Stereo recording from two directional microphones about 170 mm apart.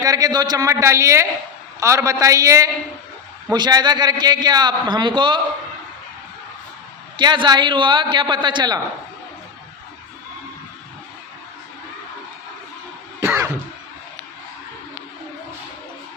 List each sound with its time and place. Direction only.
0.0 s a man's voice: 20° right (ahead or behind)
7.2 s a man's voice: 25° right (ahead or behind)
13.2 s cough: 15° right (ahead or behind)